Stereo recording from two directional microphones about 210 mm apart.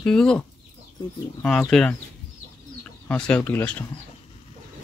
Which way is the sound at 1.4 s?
5° left (ahead or behind).